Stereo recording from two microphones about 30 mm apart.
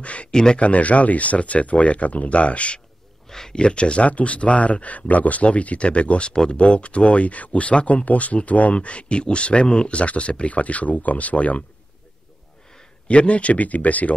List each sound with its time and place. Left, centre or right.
0.0 s a sound: left
0.3 s speech: left
0.6 s speech: left
3.3 s a sound: centre
3.5 s speech: left
4.0 s speech: left
8.7 s speech: left
13.1 s speech: left